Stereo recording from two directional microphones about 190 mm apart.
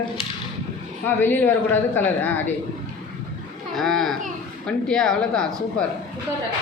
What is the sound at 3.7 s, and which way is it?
A woman's voice, centre (ahead or behind).